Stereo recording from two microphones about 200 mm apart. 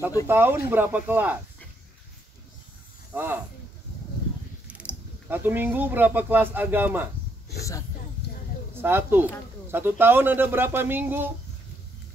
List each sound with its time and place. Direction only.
0.3 s speech: 10° right (ahead or behind)
3.1 s speech: 10° right (ahead or behind)
4.6 s speech: 5° right (ahead or behind)
8.2 s a sound: 55° left (ahead or behind)
8.8 s speech: 10° right (ahead or behind)